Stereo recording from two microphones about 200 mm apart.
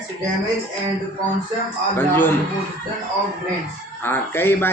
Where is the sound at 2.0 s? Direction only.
10° left (ahead or behind).